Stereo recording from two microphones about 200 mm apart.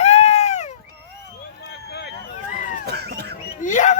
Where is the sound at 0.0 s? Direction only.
30° left (ahead or behind).